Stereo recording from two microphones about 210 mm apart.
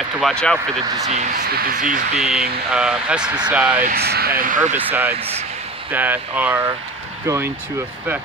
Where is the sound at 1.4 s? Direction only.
45° right (ahead or behind).